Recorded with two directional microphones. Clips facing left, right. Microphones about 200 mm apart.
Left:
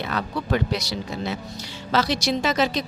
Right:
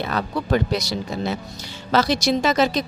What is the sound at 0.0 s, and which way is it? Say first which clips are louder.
A woman's voice: right 3 dB; 40° right (ahead or behind).